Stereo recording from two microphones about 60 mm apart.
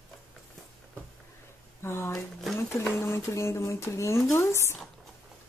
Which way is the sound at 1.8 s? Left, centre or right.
Left.